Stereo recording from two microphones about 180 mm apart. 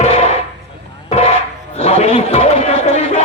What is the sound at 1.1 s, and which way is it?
Music, 35° left (ahead or behind).